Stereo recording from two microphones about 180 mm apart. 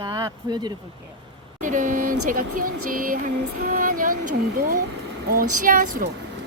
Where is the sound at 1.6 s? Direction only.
45° right (ahead or behind).